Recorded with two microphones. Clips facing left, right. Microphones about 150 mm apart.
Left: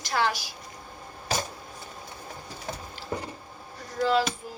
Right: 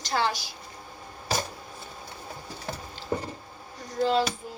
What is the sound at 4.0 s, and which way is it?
Speech, 25° right (ahead or behind).